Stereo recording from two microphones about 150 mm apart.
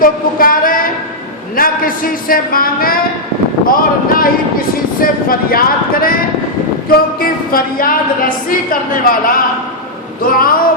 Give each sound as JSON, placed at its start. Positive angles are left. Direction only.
{"t": 0.0, "sound": "a woman's voice", "side_deg": 70}
{"t": 7.2, "sound": "a woman's voice", "side_deg": 70}
{"t": 10.3, "sound": "speech", "side_deg": 75}